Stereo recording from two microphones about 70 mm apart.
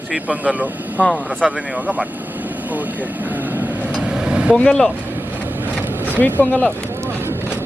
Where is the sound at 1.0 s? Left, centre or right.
Centre.